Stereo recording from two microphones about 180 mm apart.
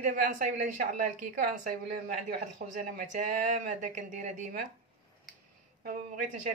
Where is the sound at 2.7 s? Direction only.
50° right (ahead or behind).